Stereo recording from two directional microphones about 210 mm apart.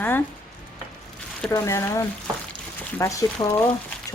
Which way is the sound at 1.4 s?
15° left (ahead or behind).